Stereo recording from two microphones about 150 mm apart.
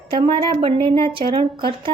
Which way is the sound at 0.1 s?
35° right (ahead or behind).